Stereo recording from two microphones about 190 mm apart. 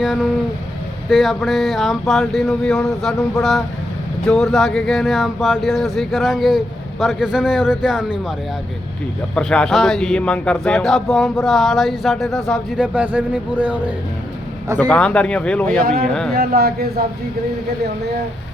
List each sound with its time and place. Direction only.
0.0 s speech: 5° right (ahead or behind)
4.3 s speech: centre (ahead or behind)
9.3 s speech: 5° left (ahead or behind)
14.8 s speech: 5° left (ahead or behind)
16.3 s a man's voice: 55° right (ahead or behind)